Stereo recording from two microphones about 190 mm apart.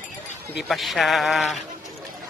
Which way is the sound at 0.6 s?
Centre (ahead or behind).